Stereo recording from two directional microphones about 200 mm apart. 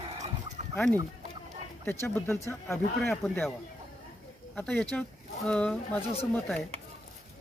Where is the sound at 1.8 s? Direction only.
10° left (ahead or behind).